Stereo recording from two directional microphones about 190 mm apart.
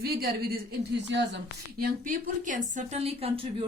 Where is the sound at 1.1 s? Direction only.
65° right (ahead or behind).